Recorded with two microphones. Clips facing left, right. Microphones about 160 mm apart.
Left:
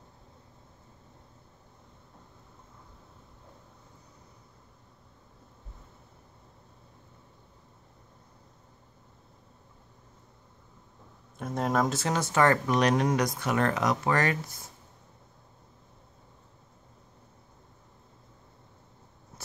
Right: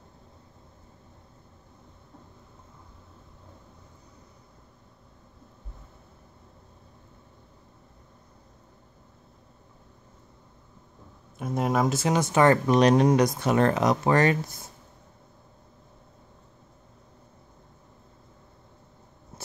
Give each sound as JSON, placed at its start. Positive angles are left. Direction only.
{"t": 11.3, "sound": "speech", "side_deg": -10}